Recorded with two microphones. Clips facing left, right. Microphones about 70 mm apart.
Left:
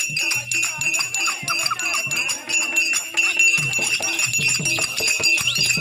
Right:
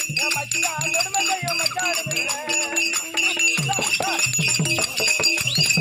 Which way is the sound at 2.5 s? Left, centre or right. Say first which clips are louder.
Left 4 dB; right.